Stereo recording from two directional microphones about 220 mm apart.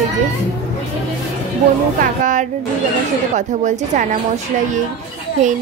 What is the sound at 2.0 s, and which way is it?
A woman's voice, 35° right (ahead or behind).